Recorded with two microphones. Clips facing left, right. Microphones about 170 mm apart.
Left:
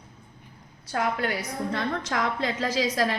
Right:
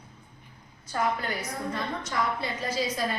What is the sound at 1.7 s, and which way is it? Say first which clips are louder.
A woman's voice: left 4 dB; 90° left.